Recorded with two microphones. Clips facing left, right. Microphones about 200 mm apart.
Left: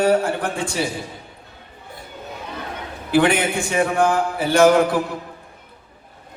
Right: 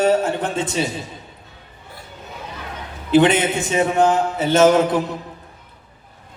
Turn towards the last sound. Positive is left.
turn(degrees=-20)  # may be behind; listen again after turning